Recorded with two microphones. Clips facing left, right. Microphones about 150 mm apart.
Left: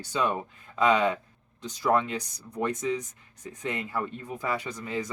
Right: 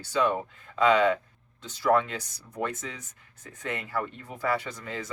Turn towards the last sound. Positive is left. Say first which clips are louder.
# left 4 dB
turn(degrees=15)  # may be behind; listen again after turning